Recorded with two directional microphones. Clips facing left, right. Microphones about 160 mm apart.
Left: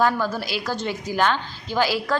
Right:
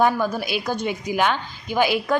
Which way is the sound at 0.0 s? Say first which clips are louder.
Right 2 dB; 15° right (ahead or behind).